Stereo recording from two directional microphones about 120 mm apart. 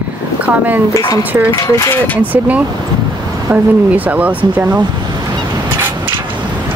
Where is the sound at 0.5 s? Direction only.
15° right (ahead or behind).